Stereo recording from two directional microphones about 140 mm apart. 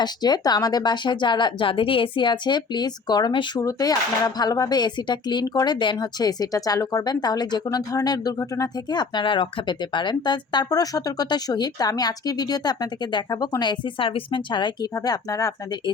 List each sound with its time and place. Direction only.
0.0 s a woman's voice: 30° left (ahead or behind)